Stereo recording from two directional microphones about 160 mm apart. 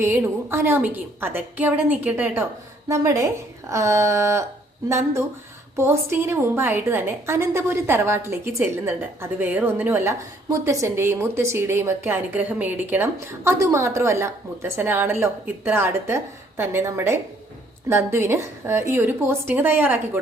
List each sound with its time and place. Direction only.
0.0 s a woman's voice: 15° right (ahead or behind)